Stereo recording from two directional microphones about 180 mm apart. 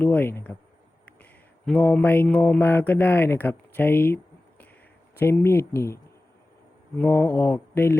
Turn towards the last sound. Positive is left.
turn(degrees=10)  # may be behind; listen again after turning